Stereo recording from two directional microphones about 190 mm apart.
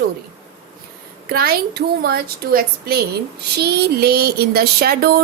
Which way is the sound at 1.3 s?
55° right (ahead or behind).